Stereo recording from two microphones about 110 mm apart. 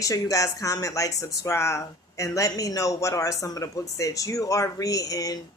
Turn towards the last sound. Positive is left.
turn(degrees=35)  # may be behind; listen again after turning